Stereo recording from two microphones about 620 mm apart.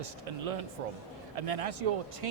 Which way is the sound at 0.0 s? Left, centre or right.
Right.